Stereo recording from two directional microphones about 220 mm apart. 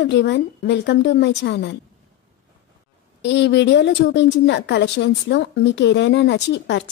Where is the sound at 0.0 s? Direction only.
50° left (ahead or behind).